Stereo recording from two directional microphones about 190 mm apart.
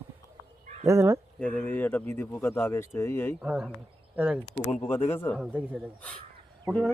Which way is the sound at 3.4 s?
5° right (ahead or behind).